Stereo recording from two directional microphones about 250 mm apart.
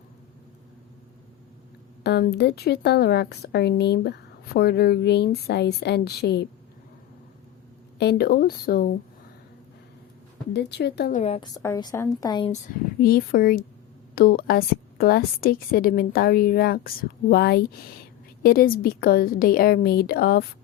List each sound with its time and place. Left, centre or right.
2.0 s a woman's voice: left
7.9 s a woman's voice: left
10.5 s a woman's voice: left
11.2 s a woman's voice: left
13.0 s a woman's voice: left